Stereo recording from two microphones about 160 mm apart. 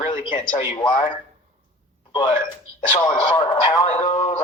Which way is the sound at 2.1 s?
30° left (ahead or behind).